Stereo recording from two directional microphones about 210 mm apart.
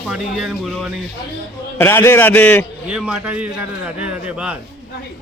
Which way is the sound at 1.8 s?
10° left (ahead or behind).